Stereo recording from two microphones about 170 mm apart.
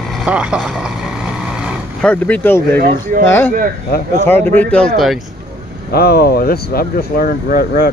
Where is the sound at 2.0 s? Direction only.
10° left (ahead or behind).